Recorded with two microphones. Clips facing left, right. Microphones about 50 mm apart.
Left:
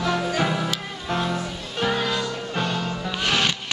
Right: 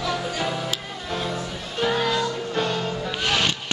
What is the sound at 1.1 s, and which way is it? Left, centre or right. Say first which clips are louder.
Music: left 3 dB; centre.